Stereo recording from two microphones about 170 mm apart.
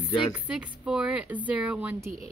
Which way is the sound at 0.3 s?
5° right (ahead or behind).